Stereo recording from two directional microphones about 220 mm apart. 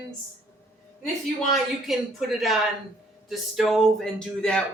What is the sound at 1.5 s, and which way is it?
Speech, centre (ahead or behind).